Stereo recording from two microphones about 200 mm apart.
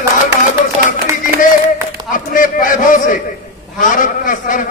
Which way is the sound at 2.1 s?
45° left (ahead or behind).